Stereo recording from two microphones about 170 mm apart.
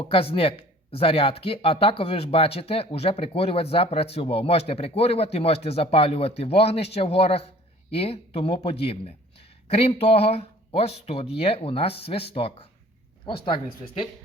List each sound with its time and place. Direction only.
0.1 s speech: 30° left (ahead or behind)